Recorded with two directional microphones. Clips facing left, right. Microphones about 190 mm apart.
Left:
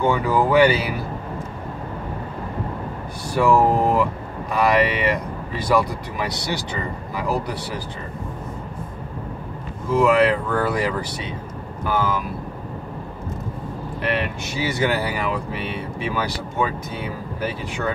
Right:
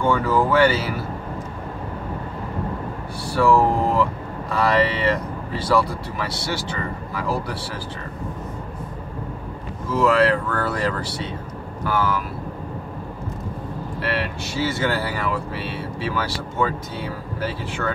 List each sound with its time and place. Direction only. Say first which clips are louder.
0.0 s speech: even; 15° left (ahead or behind)
3.3 s speech: left 1 dB; 15° left (ahead or behind)
9.8 s speech: left 1 dB; 15° left (ahead or behind)
14.0 s speech: left 2 dB; 20° left (ahead or behind)